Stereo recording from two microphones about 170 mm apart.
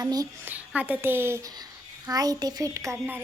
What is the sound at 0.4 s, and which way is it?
A woman's voice, 10° right (ahead or behind).